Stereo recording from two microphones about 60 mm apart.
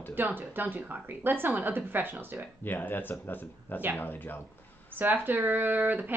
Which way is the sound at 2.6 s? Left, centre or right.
Left.